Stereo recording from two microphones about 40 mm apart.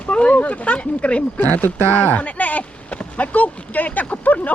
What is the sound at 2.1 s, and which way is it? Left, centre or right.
Speech, left.